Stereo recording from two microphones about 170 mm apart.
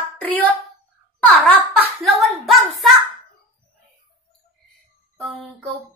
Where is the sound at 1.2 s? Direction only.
10° left (ahead or behind).